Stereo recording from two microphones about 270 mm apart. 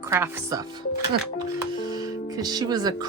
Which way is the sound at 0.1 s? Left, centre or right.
Centre.